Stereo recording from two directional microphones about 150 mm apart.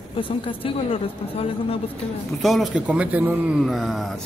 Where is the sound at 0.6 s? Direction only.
40° left (ahead or behind).